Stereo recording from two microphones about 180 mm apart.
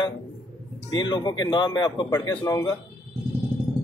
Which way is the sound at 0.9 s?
25° left (ahead or behind).